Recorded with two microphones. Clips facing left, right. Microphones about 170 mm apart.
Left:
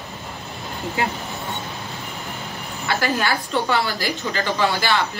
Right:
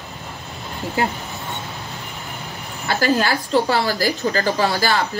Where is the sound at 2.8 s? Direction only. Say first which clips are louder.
Right 3 dB; 35° right (ahead or behind).